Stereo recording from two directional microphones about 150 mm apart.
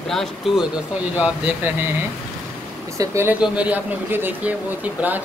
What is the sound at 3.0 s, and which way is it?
Speech, 20° right (ahead or behind).